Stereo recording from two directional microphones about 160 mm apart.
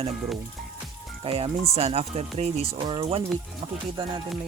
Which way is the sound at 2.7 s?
30° right (ahead or behind).